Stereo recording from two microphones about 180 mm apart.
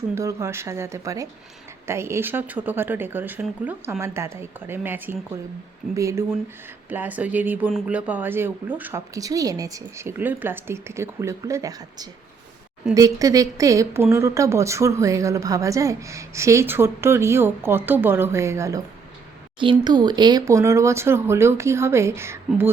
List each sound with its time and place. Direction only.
0.1 s a woman's voice: 15° right (ahead or behind)
19.5 s a woman's voice: 25° right (ahead or behind)